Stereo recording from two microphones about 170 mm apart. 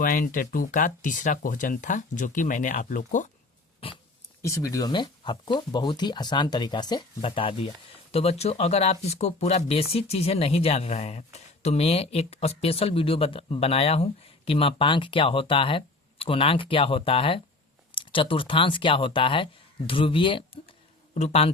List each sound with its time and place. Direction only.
0.0 s speech: 55° left (ahead or behind)
3.8 s dog: 30° left (ahead or behind)
4.4 s speech: 15° left (ahead or behind); by 21.5 s 35° left (ahead or behind)